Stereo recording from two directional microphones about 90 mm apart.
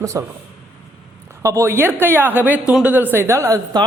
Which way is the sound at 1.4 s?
30° right (ahead or behind).